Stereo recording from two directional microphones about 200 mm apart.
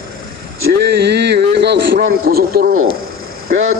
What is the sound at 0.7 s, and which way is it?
A man's voice, 55° right (ahead or behind).